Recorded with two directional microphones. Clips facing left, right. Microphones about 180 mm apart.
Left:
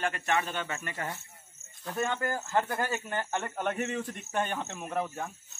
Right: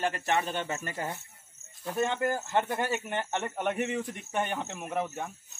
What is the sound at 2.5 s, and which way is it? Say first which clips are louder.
Speech: right 1 dB; 20° right (ahead or behind).